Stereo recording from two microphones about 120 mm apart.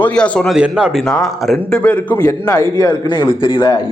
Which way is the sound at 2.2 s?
30° left (ahead or behind).